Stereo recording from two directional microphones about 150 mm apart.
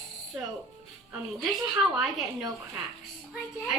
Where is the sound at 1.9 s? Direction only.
5° right (ahead or behind).